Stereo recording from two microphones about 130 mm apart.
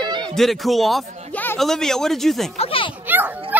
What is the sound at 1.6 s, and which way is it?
Speech, 5° left (ahead or behind).